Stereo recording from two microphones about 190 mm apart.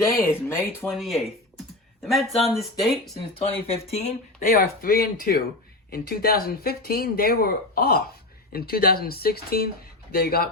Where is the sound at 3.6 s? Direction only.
35° left (ahead or behind).